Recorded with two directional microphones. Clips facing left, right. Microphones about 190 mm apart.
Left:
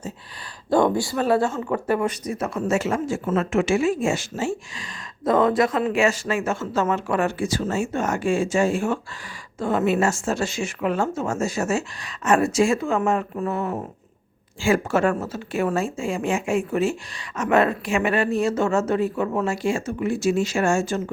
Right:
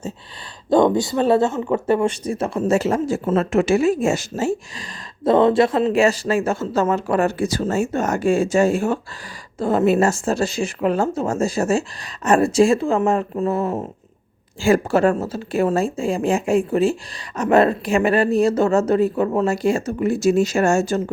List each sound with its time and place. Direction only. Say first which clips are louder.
0.7 s a woman's voice: right 4 dB; 20° right (ahead or behind); by 4.9 s 40° right (ahead or behind)
5.2 s a woman's voice: right 4 dB; 30° right (ahead or behind)